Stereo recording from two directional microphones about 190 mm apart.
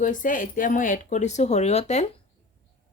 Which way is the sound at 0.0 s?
45° left (ahead or behind).